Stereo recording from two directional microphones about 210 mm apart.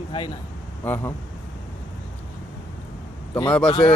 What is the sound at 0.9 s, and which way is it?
Speech, 10° left (ahead or behind).